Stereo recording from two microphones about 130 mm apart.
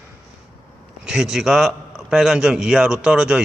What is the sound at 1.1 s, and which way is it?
A man's voice, 5° right (ahead or behind).